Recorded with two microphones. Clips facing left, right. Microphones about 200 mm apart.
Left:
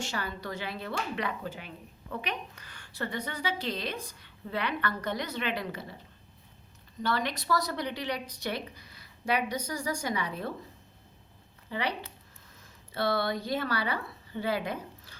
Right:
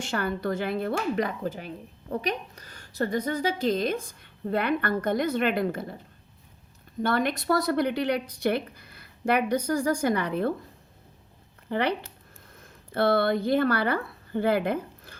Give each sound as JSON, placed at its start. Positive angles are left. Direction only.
{"t": 0.0, "sound": "speech", "side_deg": -55}
{"t": 7.0, "sound": "speech", "side_deg": -55}
{"t": 11.7, "sound": "speech", "side_deg": -55}